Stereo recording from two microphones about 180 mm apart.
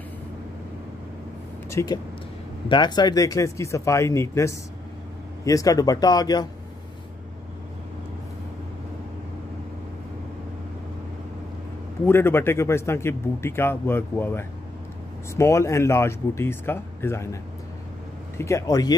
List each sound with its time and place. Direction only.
1.7 s speech: 15° left (ahead or behind)
12.1 s speech: 15° left (ahead or behind)
18.4 s speech: 15° left (ahead or behind)